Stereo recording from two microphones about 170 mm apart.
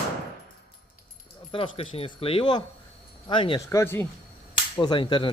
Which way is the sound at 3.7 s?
15° left (ahead or behind).